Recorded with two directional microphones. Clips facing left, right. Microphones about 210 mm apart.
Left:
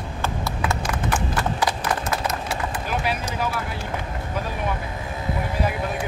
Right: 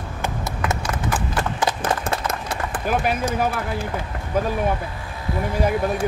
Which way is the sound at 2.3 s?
55° right (ahead or behind).